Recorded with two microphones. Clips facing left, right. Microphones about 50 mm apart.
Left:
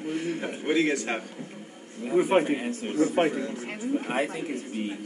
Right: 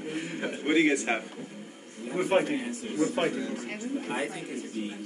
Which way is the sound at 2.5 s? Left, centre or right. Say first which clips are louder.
Left 3 dB; left.